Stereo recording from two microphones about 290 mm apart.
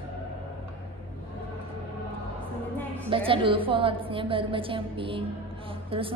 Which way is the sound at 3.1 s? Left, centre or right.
Centre.